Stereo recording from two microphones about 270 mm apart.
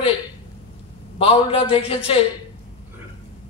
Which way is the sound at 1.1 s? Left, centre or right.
Left.